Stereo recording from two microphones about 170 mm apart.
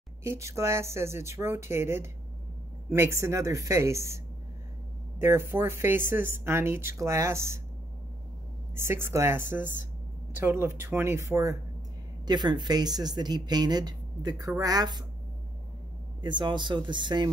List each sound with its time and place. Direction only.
0.3 s speech: 15° right (ahead or behind)
5.2 s speech: 15° right (ahead or behind)
8.7 s speech: 15° right (ahead or behind)
16.2 s speech: 25° right (ahead or behind)